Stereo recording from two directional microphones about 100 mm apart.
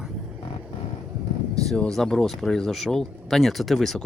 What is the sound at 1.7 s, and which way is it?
Speech, 5° left (ahead or behind).